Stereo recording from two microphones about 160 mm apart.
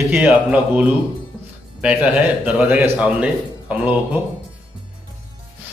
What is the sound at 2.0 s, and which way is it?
Speech, 10° right (ahead or behind).